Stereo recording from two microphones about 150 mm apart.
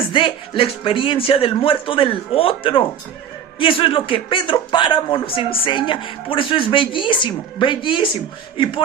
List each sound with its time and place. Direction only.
0.1 s speech: 35° left (ahead or behind)